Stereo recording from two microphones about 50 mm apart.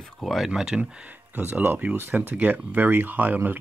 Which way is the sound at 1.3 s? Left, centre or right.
Right.